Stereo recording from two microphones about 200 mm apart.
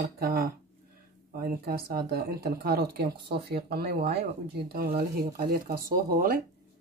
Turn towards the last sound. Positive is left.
turn(degrees=-45)  # may be behind; listen again after turning